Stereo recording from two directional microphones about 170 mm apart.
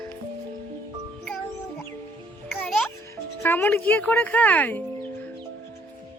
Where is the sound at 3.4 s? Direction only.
10° left (ahead or behind).